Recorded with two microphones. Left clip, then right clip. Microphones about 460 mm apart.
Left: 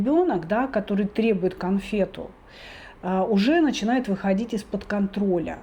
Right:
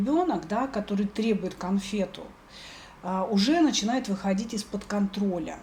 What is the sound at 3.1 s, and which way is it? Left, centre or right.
Speech, left.